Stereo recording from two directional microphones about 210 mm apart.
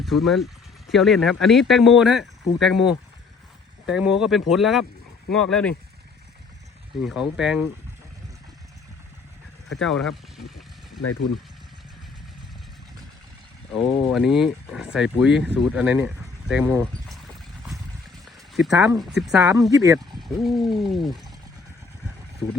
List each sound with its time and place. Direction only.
0.0 s speech: centre (ahead or behind)
7.0 s speech: 5° right (ahead or behind)
9.8 s speech: centre (ahead or behind)
11.0 s speech: 90° left
13.7 s speech: centre (ahead or behind)
18.3 s a sound: centre (ahead or behind)
18.7 s speech: 15° right (ahead or behind)
19.7 s speech: 15° right (ahead or behind)
20.1 s speech: centre (ahead or behind)